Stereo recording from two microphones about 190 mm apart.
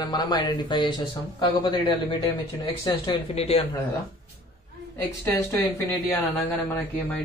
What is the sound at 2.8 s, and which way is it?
Speech, 30° left (ahead or behind).